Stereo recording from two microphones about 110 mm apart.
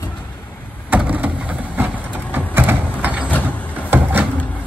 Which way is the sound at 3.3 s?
15° left (ahead or behind).